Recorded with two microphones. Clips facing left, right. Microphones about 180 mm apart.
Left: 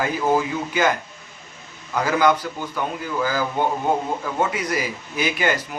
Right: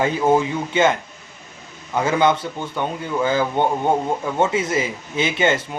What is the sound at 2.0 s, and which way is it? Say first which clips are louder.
A man's voice: right 1 dB; 25° right (ahead or behind).